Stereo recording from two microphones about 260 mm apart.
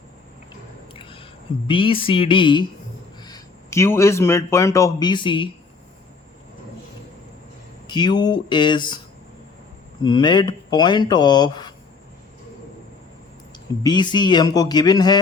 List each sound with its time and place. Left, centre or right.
0.9 s speech: centre
7.9 s speech: centre
10.0 s speech: centre
13.8 s speech: centre